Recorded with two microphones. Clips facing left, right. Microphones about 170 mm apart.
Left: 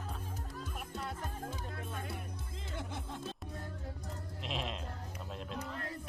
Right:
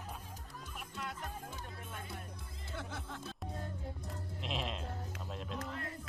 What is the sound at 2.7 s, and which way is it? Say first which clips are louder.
Music: left 1 dB; 20° left (ahead or behind).